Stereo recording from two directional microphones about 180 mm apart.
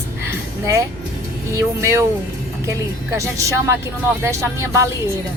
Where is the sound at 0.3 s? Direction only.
15° right (ahead or behind).